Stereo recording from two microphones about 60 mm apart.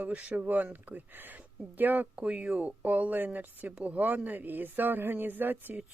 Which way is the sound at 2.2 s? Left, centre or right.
Centre.